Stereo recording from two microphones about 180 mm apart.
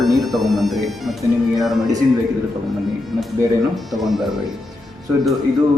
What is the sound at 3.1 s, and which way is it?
Speech, centre (ahead or behind).